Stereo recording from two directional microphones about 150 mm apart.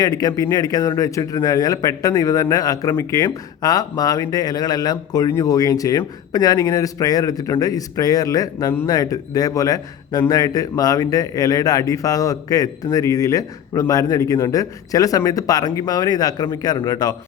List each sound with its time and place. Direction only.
0.0 s speech: 25° left (ahead or behind)